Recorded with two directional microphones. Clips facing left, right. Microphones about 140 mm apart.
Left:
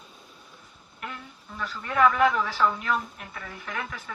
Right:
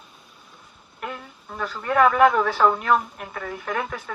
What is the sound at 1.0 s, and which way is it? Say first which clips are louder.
Speech: right 5 dB; 50° right (ahead or behind).